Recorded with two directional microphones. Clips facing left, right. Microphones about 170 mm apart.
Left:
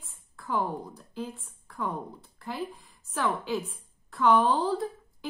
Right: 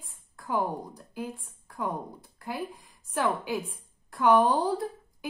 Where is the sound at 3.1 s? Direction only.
10° right (ahead or behind).